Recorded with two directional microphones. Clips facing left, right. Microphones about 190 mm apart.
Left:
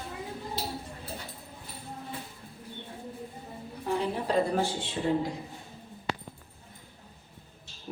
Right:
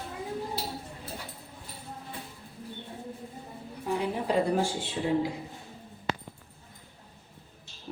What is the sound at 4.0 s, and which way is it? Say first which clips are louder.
Speech: even; 10° right (ahead or behind).